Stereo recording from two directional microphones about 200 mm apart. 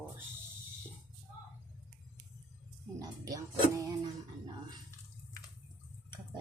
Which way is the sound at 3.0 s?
15° right (ahead or behind).